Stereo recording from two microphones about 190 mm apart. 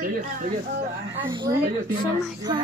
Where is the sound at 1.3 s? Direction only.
25° right (ahead or behind).